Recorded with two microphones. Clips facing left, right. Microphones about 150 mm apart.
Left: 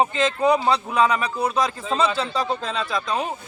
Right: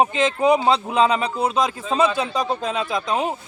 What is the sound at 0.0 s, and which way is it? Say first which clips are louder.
A man's voice: right 2 dB; 20° right (ahead or behind).